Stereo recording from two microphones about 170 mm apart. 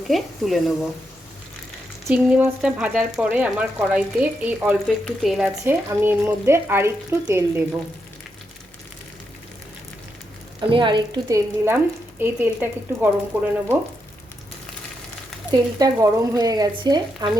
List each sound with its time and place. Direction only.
0.1 s a woman's voice: centre (ahead or behind)
2.0 s a woman's voice: 10° right (ahead or behind)
5.6 s speech: 15° right (ahead or behind)
10.7 s speech: 30° right (ahead or behind); by 13.7 s 10° right (ahead or behind)
15.5 s speech: 20° right (ahead or behind)